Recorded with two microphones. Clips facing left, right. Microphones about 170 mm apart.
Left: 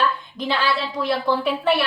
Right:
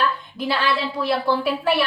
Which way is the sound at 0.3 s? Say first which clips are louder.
Right 1 dB; 5° right (ahead or behind).